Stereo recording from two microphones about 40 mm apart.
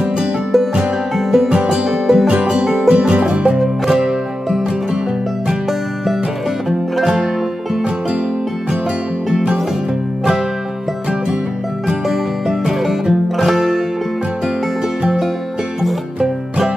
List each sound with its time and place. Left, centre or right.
1.1 s music: centre
1.5 s music: centre
3.5 s music: centre
9.3 s music: right
12.1 s music: centre
16.2 s music: centre